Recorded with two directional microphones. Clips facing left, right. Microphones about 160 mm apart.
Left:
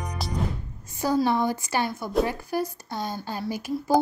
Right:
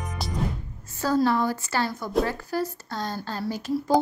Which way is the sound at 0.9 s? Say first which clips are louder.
Right 1 dB; 15° left (ahead or behind).